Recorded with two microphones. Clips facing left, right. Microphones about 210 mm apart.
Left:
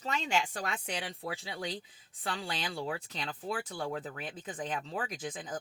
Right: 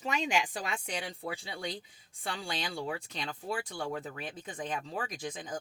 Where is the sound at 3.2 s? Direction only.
10° right (ahead or behind).